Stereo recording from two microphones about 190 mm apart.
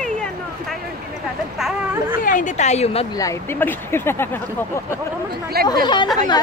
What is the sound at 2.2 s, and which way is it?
Speech, 40° left (ahead or behind).